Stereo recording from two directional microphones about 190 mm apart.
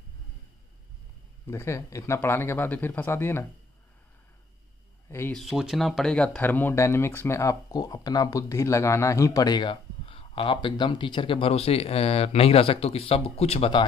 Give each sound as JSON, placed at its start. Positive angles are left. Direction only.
{"t": 1.5, "sound": "speech", "side_deg": 15}
{"t": 5.1, "sound": "speech", "side_deg": 10}
{"t": 5.4, "sound": "speech", "side_deg": 0}